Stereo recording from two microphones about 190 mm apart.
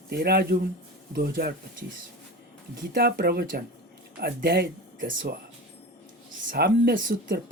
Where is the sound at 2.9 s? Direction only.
55° right (ahead or behind).